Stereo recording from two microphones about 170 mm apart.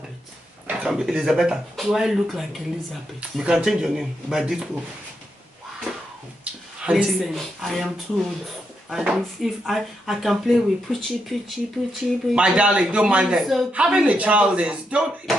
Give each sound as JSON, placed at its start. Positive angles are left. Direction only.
{"t": 0.7, "sound": "speech", "side_deg": -5}
{"t": 6.8, "sound": "speech", "side_deg": -5}
{"t": 8.9, "sound": "speech", "side_deg": 0}